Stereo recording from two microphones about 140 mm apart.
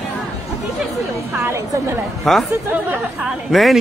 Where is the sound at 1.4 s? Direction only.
20° right (ahead or behind).